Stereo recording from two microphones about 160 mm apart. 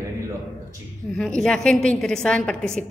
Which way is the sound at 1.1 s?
5° left (ahead or behind).